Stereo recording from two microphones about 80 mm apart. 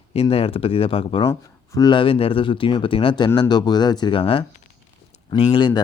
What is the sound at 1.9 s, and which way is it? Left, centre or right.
Speech, left.